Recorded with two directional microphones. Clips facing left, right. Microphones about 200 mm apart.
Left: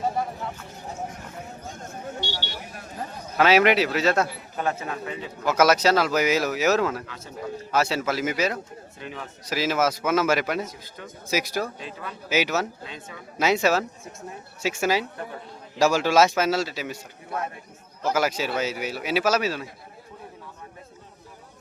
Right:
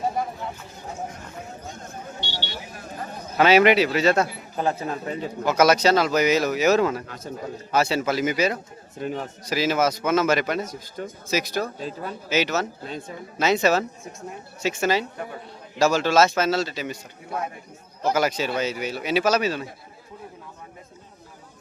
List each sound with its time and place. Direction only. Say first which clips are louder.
2.2 s vehicle: left 1 dB; 45° left (ahead or behind)
3.3 s speech: right 2 dB; centre (ahead or behind)
4.5 s a man's voice: right 3 dB; 30° right (ahead or behind)
5.5 s speech: right 1 dB; 5° left (ahead or behind)
9.0 s a man's voice: right 9 dB; 45° right (ahead or behind)
9.5 s speech: right 2 dB; centre (ahead or behind)
11.8 s a man's voice: right 5 dB; 40° right (ahead or behind)
12.3 s speech: even; 10° left (ahead or behind)